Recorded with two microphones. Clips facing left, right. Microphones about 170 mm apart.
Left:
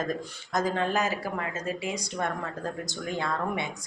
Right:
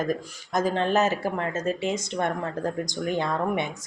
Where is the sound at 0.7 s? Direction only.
25° right (ahead or behind).